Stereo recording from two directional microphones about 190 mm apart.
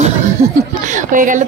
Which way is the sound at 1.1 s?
45° right (ahead or behind).